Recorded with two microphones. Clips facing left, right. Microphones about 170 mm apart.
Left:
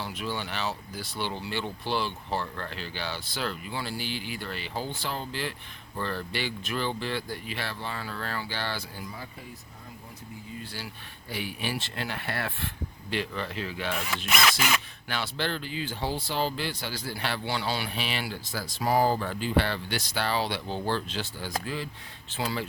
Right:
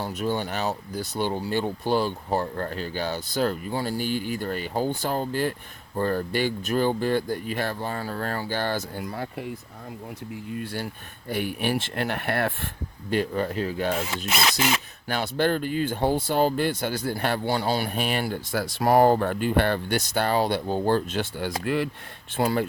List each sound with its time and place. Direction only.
0.0 s speech: 45° right (ahead or behind); by 9.5 s 65° right (ahead or behind)
10.5 s speech: 60° right (ahead or behind); by 14.5 s 30° right (ahead or behind)
15.1 s speech: 45° right (ahead or behind); by 21.8 s 65° right (ahead or behind)
22.4 s speech: 55° right (ahead or behind)